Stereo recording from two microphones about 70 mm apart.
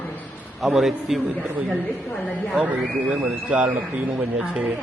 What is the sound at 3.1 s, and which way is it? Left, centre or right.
Speech, centre.